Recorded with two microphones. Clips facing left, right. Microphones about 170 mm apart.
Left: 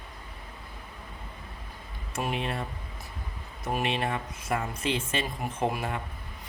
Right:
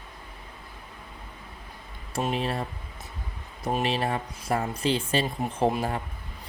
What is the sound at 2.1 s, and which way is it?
Speech, 35° right (ahead or behind).